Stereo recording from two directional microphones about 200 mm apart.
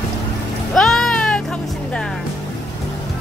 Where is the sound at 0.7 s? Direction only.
Centre (ahead or behind).